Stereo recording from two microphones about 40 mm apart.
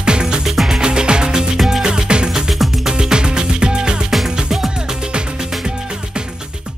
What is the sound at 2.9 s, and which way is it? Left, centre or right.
Music, right.